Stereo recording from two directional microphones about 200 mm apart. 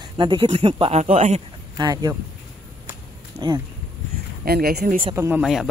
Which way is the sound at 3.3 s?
20° right (ahead or behind).